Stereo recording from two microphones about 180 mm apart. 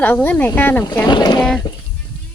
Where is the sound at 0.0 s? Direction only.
10° left (ahead or behind).